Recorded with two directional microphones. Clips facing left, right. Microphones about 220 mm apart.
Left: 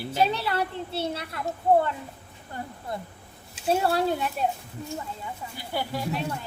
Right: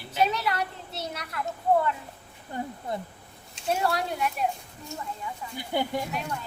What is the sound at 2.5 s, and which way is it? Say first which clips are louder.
Speech: right 2 dB; 20° right (ahead or behind).